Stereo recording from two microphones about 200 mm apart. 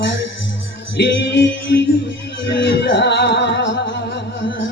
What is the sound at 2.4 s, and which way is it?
Music, 65° left (ahead or behind).